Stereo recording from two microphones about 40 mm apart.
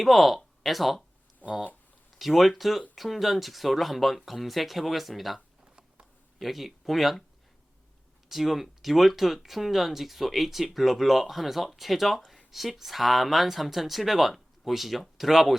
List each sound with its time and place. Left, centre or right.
0.0 s speech: centre
1.4 s speech: left
2.1 s speech: centre
6.4 s speech: centre
8.3 s speech: centre